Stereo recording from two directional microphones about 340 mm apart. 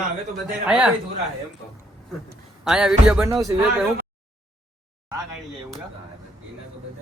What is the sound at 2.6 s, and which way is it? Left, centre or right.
Speech, centre.